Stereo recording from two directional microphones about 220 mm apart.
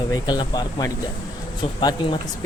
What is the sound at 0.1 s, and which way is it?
Speech, 20° left (ahead or behind).